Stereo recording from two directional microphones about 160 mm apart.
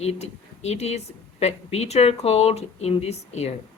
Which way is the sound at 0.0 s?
40° left (ahead or behind).